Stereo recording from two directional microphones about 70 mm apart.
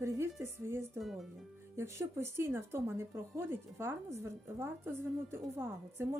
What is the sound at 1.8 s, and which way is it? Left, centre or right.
Speech, right.